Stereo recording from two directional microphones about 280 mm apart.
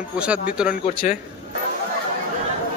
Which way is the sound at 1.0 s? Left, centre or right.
Left.